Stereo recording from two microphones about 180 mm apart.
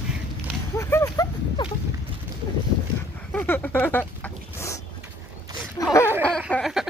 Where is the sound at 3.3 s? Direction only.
10° left (ahead or behind).